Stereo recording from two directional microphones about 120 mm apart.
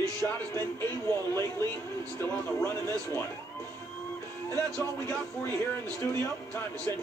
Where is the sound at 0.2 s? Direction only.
20° left (ahead or behind).